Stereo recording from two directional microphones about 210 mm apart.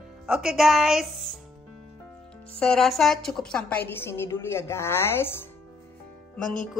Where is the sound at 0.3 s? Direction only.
5° right (ahead or behind).